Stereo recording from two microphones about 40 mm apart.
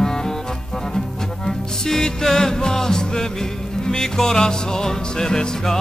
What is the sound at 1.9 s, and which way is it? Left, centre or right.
Music, centre.